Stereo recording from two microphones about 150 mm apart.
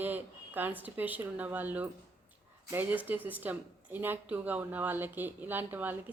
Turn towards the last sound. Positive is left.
turn(degrees=-10)  # may be behind; listen again after turning